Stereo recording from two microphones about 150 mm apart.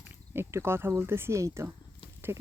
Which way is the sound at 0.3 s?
15° right (ahead or behind).